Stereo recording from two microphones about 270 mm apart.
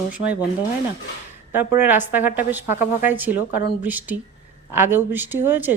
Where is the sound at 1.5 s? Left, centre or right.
Centre.